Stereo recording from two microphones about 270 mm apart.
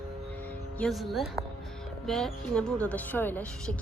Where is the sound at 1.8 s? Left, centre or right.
Centre.